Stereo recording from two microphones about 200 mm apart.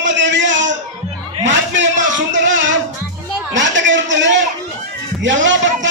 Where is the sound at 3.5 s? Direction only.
65° right (ahead or behind).